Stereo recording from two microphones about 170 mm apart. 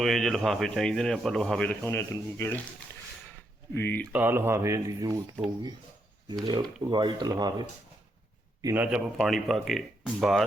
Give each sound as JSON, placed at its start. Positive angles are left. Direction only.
{"t": 0.0, "sound": "a man's voice", "side_deg": 0}
{"t": 3.8, "sound": "speech", "side_deg": 10}
{"t": 4.1, "sound": "speech", "side_deg": -10}
{"t": 6.4, "sound": "speech", "side_deg": -25}
{"t": 8.6, "sound": "a man's voice", "side_deg": -10}